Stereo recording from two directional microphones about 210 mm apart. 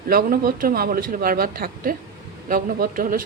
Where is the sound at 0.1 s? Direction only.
45° right (ahead or behind).